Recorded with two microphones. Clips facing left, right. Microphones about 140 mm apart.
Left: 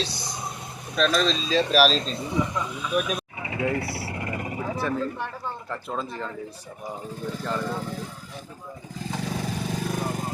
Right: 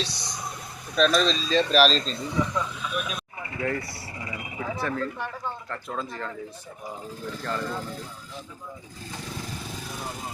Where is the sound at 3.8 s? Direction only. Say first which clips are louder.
Left 6 dB; 65° left (ahead or behind); by 4.5 s 50° left (ahead or behind).